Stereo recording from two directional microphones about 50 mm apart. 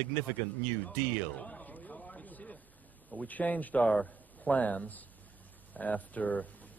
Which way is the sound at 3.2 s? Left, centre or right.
Left.